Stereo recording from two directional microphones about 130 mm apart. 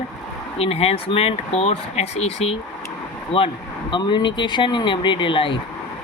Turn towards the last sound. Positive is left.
turn(degrees=40)  # may be behind; listen again after turning